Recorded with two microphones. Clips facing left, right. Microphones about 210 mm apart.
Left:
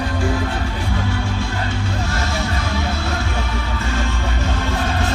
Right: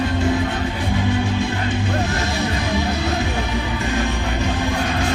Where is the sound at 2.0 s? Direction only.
15° right (ahead or behind).